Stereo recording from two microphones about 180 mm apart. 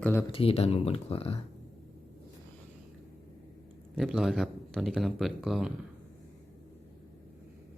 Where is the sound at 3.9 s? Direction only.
Centre (ahead or behind).